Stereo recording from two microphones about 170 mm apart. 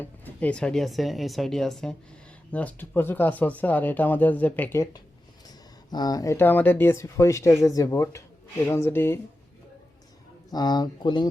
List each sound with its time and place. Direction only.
0.0 s speech: 10° left (ahead or behind)
10.5 s speech: 25° left (ahead or behind)